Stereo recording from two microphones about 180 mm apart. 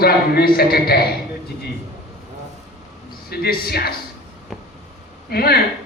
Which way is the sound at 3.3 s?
60° left (ahead or behind).